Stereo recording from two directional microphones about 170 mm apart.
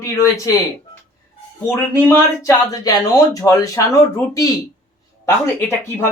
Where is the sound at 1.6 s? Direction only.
15° left (ahead or behind).